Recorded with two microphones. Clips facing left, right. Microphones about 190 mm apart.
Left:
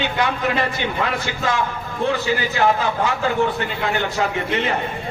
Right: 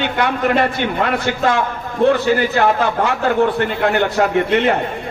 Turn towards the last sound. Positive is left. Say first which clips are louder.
# right 7 dB
turn(degrees=-60)  # may be behind; listen again after turning